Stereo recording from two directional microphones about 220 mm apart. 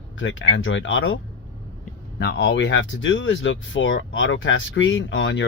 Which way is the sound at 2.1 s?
50° left (ahead or behind).